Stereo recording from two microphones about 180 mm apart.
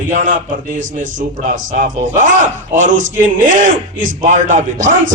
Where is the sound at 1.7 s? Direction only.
45° right (ahead or behind).